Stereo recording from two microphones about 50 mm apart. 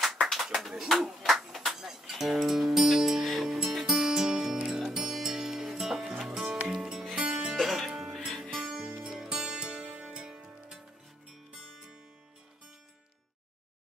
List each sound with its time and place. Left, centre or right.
0.2 s a sound: centre
4.6 s music: centre
7.2 s music: centre
7.5 s music: centre
11.5 s music: centre